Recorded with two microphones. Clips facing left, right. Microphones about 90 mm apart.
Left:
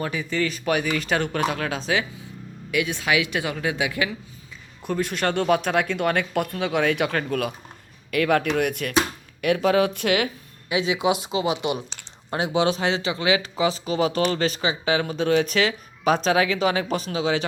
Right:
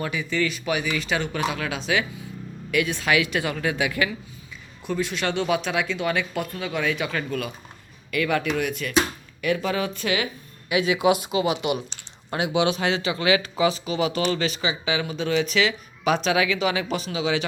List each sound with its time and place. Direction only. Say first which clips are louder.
0.0 s speech: even; 35° left (ahead or behind)
2.7 s a woman's voice: right 1 dB; 20° left (ahead or behind)
4.8 s speech: left 2 dB; 45° left (ahead or behind); by 10.2 s 65° left (ahead or behind)
10.7 s a woman's voice: right 2 dB; 25° left (ahead or behind); by 17.4 s 40° left (ahead or behind)